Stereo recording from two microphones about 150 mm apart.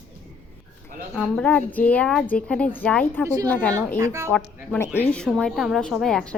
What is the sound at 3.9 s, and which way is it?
Speech, 20° right (ahead or behind).